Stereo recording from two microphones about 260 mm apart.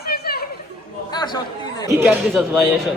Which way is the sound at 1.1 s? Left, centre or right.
Centre.